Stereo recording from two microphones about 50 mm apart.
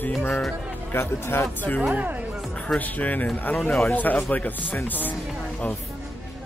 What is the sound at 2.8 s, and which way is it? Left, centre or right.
Speech, left.